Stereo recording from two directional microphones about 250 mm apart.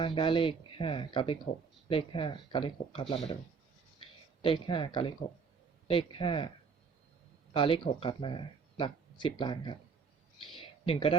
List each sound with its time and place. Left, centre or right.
0.0 s speech: centre
4.4 s speech: centre
7.5 s speech: left
10.4 s a sound: centre